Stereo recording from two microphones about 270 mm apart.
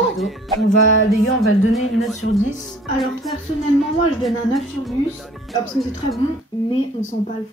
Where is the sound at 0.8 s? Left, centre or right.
Left.